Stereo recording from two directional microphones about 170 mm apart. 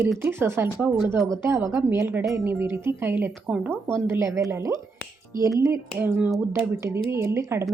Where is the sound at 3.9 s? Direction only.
15° right (ahead or behind).